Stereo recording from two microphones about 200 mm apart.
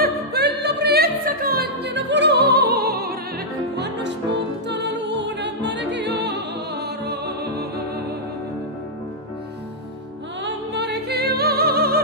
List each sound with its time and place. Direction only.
0.0 s music: 55° right (ahead or behind)
10.4 s music: 60° right (ahead or behind)